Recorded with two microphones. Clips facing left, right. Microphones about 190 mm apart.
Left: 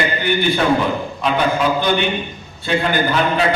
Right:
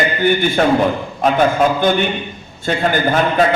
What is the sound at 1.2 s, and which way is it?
A man's voice, 45° right (ahead or behind).